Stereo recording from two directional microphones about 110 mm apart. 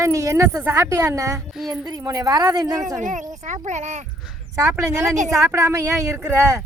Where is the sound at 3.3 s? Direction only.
90° right.